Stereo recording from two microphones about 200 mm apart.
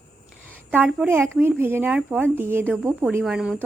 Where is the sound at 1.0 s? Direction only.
10° right (ahead or behind).